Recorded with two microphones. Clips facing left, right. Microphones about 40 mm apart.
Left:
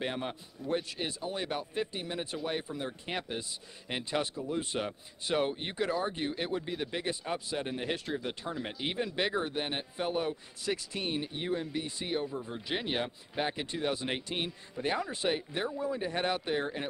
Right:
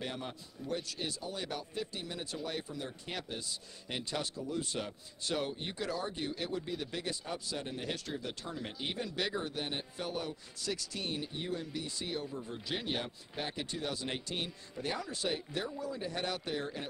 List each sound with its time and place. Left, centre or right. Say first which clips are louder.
0.0 s a man's voice: left 5 dB; left